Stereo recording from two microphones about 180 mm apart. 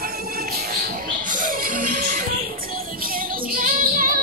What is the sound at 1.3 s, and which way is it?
Music, 50° right (ahead or behind).